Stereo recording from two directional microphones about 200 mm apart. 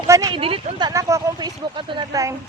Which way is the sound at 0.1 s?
20° right (ahead or behind).